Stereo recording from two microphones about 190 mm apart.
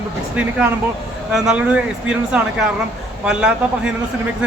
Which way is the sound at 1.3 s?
5° right (ahead or behind).